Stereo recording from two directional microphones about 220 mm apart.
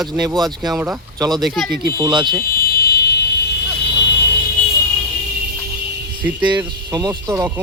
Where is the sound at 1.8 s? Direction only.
20° right (ahead or behind).